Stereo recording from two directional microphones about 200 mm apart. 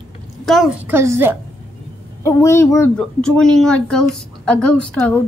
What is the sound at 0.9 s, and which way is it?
Speech, 10° right (ahead or behind).